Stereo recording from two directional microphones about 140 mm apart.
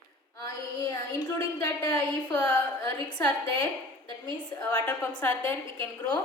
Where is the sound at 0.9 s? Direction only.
20° left (ahead or behind).